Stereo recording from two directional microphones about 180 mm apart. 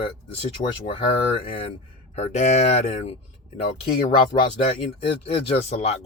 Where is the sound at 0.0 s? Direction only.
30° left (ahead or behind).